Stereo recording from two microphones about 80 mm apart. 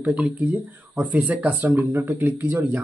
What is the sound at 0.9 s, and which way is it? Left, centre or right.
Speech, centre.